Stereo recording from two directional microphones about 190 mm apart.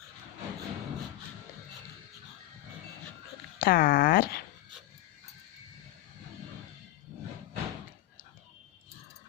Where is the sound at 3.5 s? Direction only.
50° left (ahead or behind).